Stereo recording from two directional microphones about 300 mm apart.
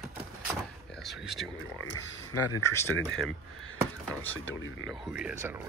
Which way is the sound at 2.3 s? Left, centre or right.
Left.